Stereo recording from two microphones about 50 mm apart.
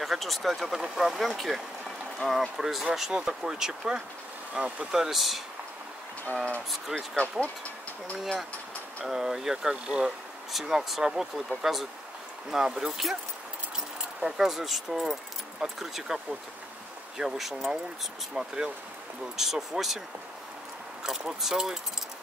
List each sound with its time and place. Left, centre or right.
0.0 s speech: centre; by 5.0 s right
5.0 s speech: centre
6.7 s speech: centre
7.2 s speech: left
9.0 s speech: centre
17.2 s speech: centre
18.3 s speech: centre
21.0 s speech: centre